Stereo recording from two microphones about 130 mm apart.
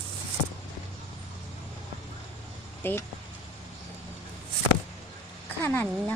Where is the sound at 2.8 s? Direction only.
15° left (ahead or behind).